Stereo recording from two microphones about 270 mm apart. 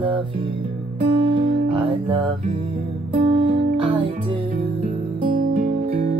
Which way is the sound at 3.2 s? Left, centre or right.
Right.